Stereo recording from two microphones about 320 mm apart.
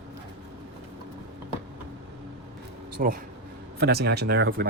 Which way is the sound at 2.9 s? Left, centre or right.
Right.